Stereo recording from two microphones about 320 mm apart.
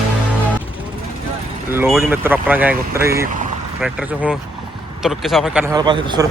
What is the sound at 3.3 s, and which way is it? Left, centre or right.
Vehicle, right.